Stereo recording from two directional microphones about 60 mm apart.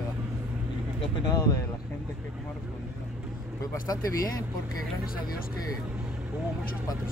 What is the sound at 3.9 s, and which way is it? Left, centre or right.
Speech, left.